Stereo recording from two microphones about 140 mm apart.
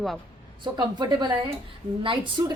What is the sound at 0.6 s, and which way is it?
Speech, 30° right (ahead or behind).